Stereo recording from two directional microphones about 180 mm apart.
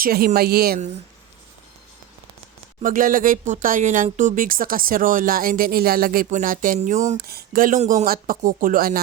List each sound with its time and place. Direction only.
0.0 s a woman's voice: 55° right (ahead or behind)
2.8 s speech: 50° right (ahead or behind)
7.3 s speech: 55° right (ahead or behind)